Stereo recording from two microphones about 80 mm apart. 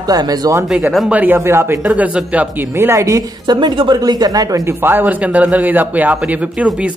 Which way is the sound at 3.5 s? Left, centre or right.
Right.